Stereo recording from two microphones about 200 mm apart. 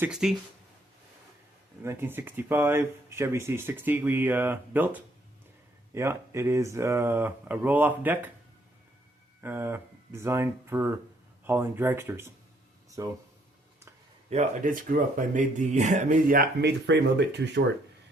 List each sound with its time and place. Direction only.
0.0 s speech: 5° right (ahead or behind)
1.8 s speech: 10° right (ahead or behind)
5.9 s speech: 15° right (ahead or behind)
9.4 s speech: 10° right (ahead or behind)
14.3 s speech: 35° right (ahead or behind); by 17.6 s 60° right (ahead or behind)